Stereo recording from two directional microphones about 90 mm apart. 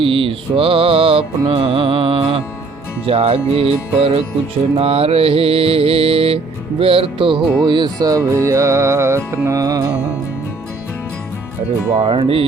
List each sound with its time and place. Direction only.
0.0 s music: 80° right
3.1 s mantra: 90° right; by 8.2 s 50° right (ahead or behind)
8.4 s music: 35° right (ahead or behind)
9.6 s music: 45° right (ahead or behind)
11.9 s mantra: 90° right